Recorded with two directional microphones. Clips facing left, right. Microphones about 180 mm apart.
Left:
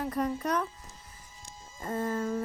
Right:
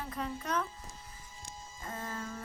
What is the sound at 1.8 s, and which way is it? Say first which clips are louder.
Music: left 10 dB; 45° left (ahead or behind).